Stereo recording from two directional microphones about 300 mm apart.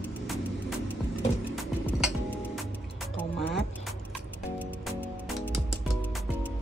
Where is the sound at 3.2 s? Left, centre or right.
Centre.